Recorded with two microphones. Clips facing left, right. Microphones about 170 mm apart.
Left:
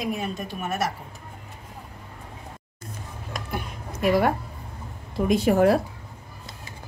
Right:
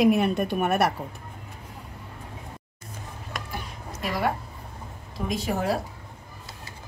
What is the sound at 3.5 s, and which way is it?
Music, 55° left (ahead or behind).